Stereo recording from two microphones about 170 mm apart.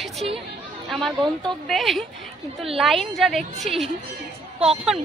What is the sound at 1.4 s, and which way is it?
Speech, centre (ahead or behind).